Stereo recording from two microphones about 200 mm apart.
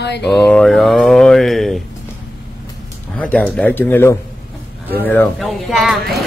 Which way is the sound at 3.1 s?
5° left (ahead or behind).